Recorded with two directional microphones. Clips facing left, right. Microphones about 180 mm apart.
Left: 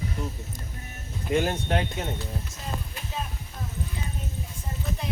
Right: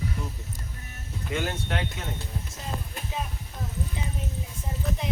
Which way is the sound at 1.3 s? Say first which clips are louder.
Left 5 dB; 30° left (ahead or behind).